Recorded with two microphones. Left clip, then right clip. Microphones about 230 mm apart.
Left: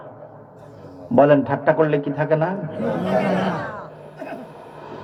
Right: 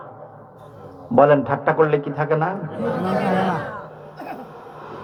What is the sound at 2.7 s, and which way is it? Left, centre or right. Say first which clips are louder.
Speech: even; centre.